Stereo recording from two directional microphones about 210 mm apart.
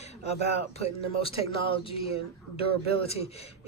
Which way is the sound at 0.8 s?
25° left (ahead or behind).